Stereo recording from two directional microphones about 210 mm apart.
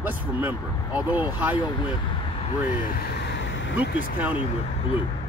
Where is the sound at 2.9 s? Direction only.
55° left (ahead or behind).